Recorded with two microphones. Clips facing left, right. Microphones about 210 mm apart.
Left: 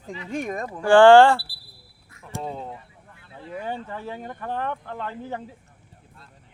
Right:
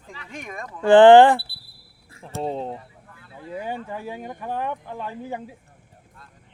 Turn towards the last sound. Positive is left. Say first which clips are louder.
# right 1 dB
turn(degrees=-10)  # may be behind; listen again after turning